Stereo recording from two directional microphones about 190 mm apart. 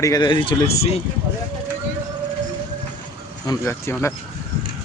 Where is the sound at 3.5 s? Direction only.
15° left (ahead or behind).